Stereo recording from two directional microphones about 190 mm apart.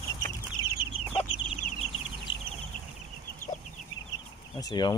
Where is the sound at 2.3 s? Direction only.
75° left (ahead or behind).